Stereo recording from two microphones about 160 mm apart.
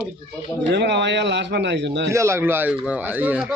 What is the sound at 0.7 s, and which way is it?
A man's voice, 90° right.